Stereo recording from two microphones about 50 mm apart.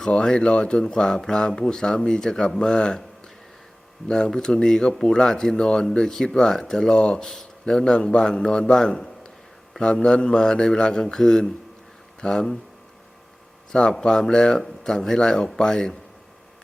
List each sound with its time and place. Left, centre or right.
0.0 s speech: centre
4.1 s speech: centre
14.0 s speech: centre